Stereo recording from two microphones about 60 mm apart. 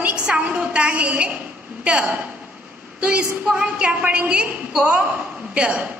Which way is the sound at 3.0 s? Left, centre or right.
Right.